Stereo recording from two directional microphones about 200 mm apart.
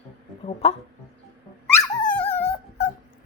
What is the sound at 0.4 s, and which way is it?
Speech, 30° left (ahead or behind).